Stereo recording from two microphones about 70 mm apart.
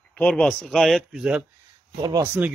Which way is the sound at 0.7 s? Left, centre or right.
Centre.